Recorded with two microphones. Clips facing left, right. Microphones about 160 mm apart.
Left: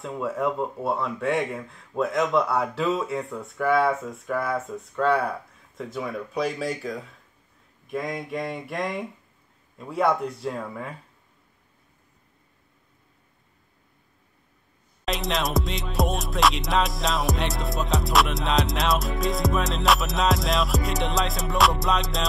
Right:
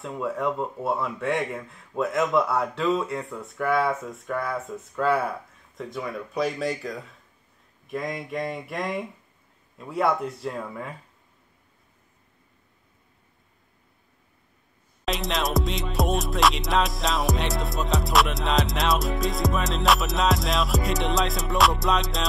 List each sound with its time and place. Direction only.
0.0 s music: centre (ahead or behind)
15.0 s music: centre (ahead or behind)